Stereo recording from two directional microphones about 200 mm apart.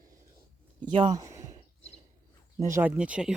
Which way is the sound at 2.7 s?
10° right (ahead or behind).